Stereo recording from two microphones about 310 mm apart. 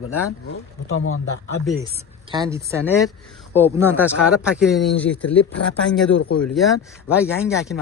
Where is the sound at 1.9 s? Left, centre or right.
Centre.